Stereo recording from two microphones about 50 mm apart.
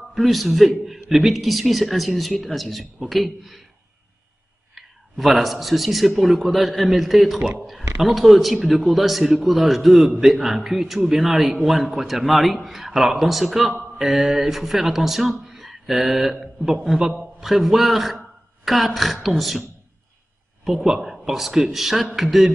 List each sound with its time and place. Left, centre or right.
0.1 s speech: centre
4.7 s speech: centre
6.0 s speech: right
6.4 s speech: centre
20.6 s speech: centre